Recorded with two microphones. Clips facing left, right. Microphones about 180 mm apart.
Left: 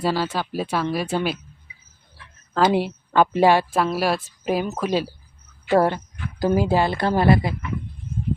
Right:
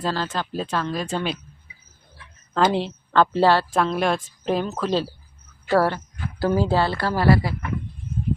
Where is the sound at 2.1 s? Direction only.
Centre (ahead or behind).